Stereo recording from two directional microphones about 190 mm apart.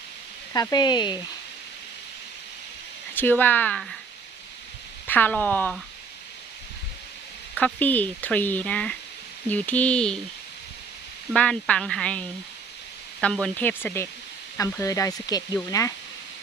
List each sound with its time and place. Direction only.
0.5 s speech: 20° left (ahead or behind)
3.2 s speech: 10° left (ahead or behind)
5.0 s speech: 10° left (ahead or behind)
7.5 s speech: 10° left (ahead or behind)
11.3 s speech: 5° left (ahead or behind)
13.2 s speech: 5° left (ahead or behind)